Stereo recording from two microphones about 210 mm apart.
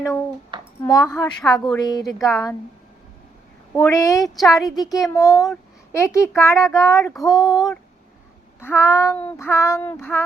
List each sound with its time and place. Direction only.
0.5 s a sound: 25° right (ahead or behind)
0.9 s child singing: 15° left (ahead or behind)
1.4 s child singing: centre (ahead or behind)
1.7 s a woman's voice: 20° left (ahead or behind)
2.2 s child singing: 15° left (ahead or behind)
3.8 s child singing: 15° left (ahead or behind)
4.2 s child singing: centre (ahead or behind)
4.7 s a woman's voice: 20° left (ahead or behind)
5.0 s child singing: 15° left (ahead or behind)
7.0 s child singing: centre (ahead or behind)
7.4 s child singing: 15° left (ahead or behind)
8.9 s child singing: 10° left (ahead or behind)